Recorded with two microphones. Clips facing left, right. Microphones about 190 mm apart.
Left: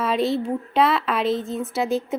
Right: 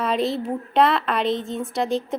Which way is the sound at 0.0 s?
Centre (ahead or behind).